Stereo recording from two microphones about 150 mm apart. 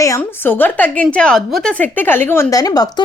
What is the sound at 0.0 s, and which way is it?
A woman's voice, 15° left (ahead or behind).